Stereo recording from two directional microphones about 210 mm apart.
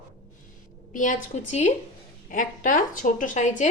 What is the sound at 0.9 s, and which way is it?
Speech, 40° left (ahead or behind).